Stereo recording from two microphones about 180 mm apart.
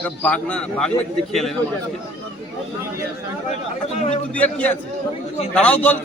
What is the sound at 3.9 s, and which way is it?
Speech, 40° left (ahead or behind).